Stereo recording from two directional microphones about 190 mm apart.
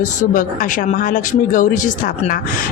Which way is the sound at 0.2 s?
45° left (ahead or behind).